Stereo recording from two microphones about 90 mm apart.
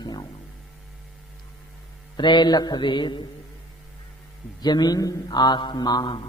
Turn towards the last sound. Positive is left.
turn(degrees=50)  # may be behind; listen again after turning